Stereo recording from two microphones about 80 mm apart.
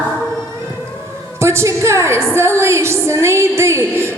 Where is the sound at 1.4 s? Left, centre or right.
Right.